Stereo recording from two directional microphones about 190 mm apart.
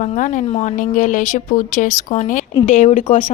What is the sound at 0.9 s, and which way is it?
A woman's voice, 45° left (ahead or behind).